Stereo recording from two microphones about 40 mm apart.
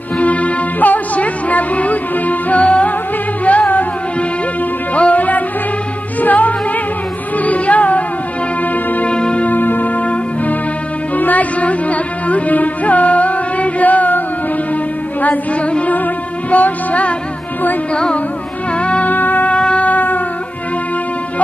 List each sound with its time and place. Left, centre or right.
0.2 s music: left
4.9 s music: left
9.0 s music: left
9.5 s music: left
11.1 s music: left
16.4 s music: left
18.8 s music: left
19.0 s music: left
19.5 s shofar: left
19.9 s music: left